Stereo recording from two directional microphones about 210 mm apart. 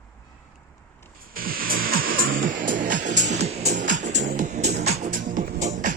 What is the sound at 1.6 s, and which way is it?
Music, 45° right (ahead or behind).